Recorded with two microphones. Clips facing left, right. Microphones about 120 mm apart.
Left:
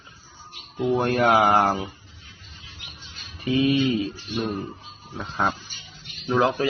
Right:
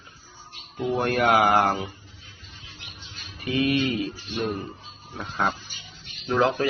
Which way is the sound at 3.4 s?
25° left (ahead or behind).